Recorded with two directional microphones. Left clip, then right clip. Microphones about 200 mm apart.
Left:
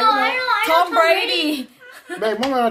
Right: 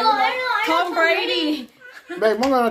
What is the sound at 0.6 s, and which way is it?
A woman's voice, 60° left (ahead or behind).